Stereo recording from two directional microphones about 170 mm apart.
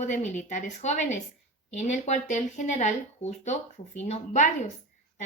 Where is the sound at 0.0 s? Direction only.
45° left (ahead or behind).